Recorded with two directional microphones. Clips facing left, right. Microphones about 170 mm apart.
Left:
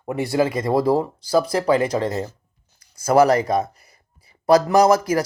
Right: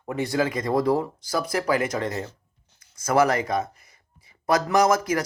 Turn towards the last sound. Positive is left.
turn(degrees=30)  # may be behind; listen again after turning